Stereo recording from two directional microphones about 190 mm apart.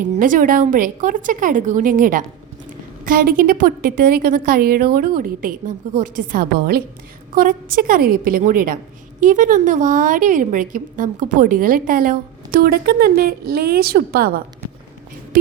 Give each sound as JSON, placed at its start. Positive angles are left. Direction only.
{"t": 0.0, "sound": "a woman's voice", "side_deg": -45}